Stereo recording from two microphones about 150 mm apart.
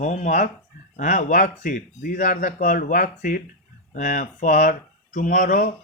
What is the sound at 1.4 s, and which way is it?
Speech, 60° left (ahead or behind).